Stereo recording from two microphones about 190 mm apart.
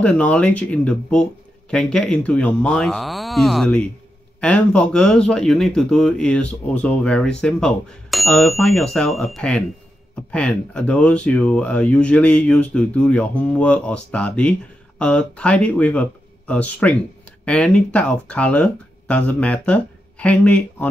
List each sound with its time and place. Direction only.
0.0 s speech: 5° left (ahead or behind)